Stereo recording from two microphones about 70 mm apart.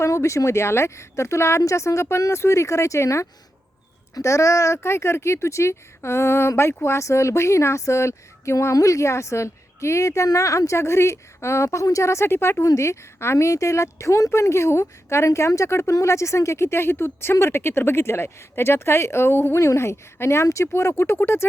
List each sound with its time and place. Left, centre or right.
0.0 s a woman's voice: left